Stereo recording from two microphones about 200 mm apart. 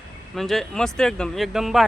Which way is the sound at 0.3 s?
Centre (ahead or behind).